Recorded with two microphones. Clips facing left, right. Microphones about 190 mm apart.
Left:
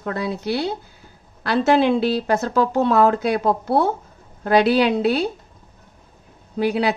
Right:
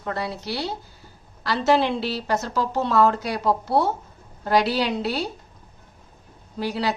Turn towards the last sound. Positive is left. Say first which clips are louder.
# left 6 dB
turn(degrees=60)  # may be behind; listen again after turning